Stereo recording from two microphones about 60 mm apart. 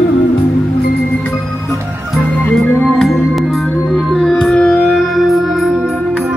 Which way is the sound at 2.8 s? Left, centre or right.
Centre.